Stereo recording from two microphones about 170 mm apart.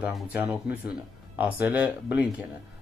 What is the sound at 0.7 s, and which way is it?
Speech, 70° left (ahead or behind).